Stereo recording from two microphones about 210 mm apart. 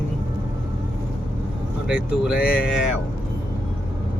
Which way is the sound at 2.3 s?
45° left (ahead or behind).